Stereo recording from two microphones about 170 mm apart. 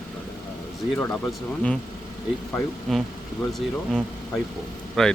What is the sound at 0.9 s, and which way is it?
Speech, 10° left (ahead or behind).